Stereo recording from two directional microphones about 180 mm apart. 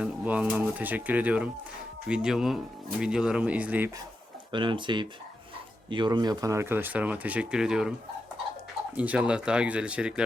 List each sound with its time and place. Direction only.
0.0 s speech: 5° right (ahead or behind)
4.5 s speech: 25° right (ahead or behind); by 7.9 s 5° right (ahead or behind)
9.0 s speech: 5° right (ahead or behind)